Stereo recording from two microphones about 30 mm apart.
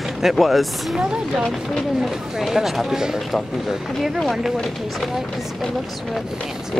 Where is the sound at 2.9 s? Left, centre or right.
Centre.